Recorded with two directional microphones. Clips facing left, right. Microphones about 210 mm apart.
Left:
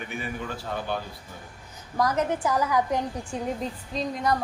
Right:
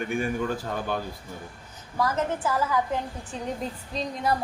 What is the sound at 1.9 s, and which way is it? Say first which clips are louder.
A woman's voice: left 2 dB; 15° left (ahead or behind).